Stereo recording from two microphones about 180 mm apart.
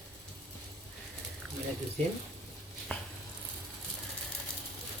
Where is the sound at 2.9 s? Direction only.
10° left (ahead or behind).